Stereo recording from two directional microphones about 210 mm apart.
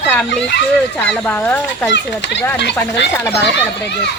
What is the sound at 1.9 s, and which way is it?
Speech, 55° left (ahead or behind).